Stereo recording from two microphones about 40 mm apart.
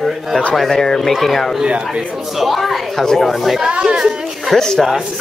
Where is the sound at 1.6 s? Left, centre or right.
Right.